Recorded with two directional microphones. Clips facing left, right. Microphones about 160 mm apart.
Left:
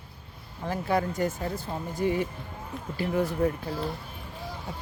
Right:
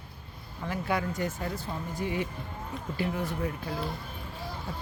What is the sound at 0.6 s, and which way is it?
Speech, 40° left (ahead or behind).